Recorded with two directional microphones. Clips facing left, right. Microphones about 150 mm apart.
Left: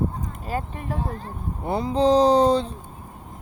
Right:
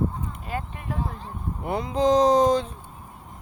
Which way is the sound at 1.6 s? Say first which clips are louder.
Left 2 dB; 30° left (ahead or behind).